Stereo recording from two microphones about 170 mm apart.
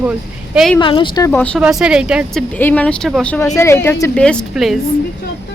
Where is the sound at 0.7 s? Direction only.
30° left (ahead or behind).